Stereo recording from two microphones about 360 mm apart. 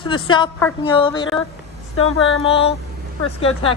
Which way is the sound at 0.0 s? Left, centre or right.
Centre.